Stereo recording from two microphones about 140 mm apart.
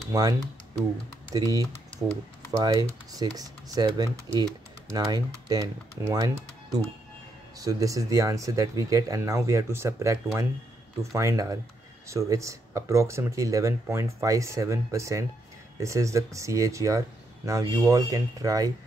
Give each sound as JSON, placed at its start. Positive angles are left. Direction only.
{"t": 0.1, "sound": "speech", "side_deg": -25}